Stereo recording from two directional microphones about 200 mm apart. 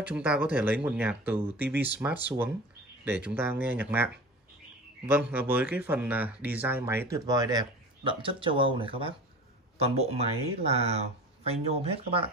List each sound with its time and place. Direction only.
0.0 s speech: 5° right (ahead or behind); by 12.3 s 30° right (ahead or behind)